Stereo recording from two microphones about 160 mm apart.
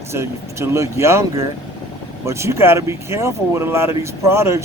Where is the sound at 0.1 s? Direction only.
15° right (ahead or behind).